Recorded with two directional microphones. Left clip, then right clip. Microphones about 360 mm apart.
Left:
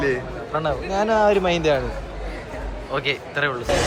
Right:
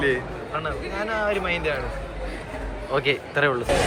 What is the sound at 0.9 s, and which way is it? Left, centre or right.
Speech, centre.